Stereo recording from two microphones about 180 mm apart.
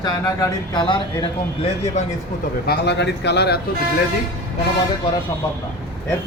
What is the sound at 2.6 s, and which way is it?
Speech, 70° left (ahead or behind).